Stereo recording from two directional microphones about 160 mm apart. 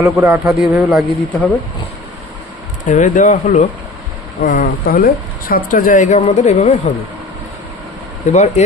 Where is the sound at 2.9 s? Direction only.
55° left (ahead or behind).